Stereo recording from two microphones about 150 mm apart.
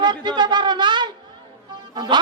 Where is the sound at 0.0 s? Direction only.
30° right (ahead or behind).